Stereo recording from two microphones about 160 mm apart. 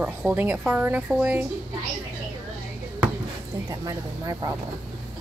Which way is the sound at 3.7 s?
20° right (ahead or behind).